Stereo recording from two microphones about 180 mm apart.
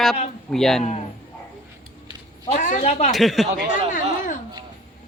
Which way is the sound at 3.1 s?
Centre (ahead or behind).